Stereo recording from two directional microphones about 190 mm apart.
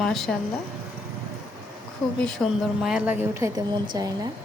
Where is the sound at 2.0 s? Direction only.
5° left (ahead or behind).